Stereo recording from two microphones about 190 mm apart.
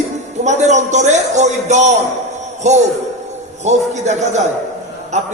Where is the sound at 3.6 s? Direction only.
40° right (ahead or behind).